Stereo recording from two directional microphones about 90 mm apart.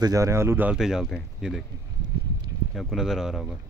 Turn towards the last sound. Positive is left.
turn(degrees=-5)  # may be behind; listen again after turning